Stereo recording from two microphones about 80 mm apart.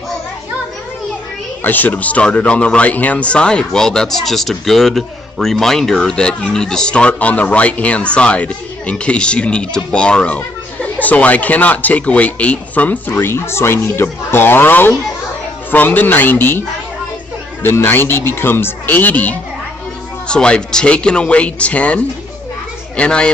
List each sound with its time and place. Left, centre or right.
1.6 s speech: left